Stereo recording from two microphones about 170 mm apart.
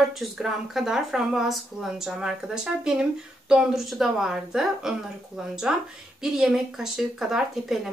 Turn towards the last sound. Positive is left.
turn(degrees=0)  # may be behind; listen again after turning